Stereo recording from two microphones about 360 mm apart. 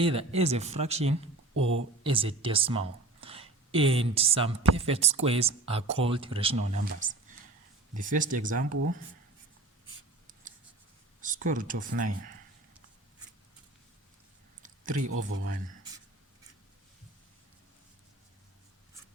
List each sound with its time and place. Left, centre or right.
0.0 s speech: centre
1.6 s speech: right
2.0 s speech: centre
11.2 s speech: right
14.6 s a sound: right
15.1 s speech: right